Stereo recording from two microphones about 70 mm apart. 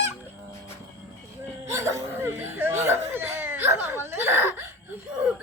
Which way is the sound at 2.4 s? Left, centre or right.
Right.